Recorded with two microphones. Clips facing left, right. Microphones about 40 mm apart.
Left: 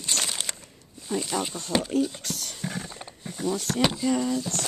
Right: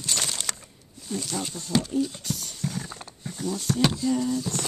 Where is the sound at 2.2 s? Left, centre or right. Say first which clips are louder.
Right 1 dB; left.